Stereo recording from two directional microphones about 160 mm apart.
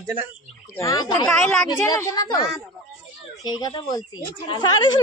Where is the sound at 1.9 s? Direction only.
25° left (ahead or behind).